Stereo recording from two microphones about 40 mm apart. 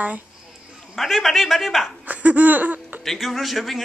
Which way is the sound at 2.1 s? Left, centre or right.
Right.